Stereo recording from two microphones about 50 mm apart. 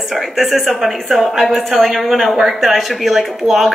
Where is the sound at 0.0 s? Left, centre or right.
Centre.